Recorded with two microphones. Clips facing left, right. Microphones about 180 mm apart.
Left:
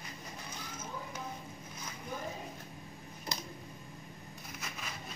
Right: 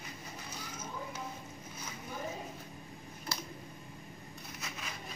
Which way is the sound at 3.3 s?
20° left (ahead or behind).